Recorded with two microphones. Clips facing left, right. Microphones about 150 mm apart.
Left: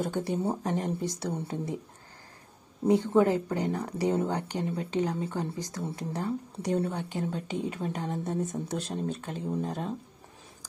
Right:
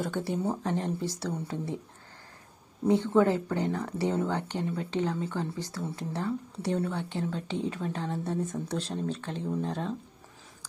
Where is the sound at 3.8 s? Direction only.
15° left (ahead or behind).